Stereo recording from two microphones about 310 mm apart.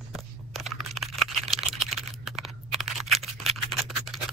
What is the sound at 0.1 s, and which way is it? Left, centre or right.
Computer keyboard, centre.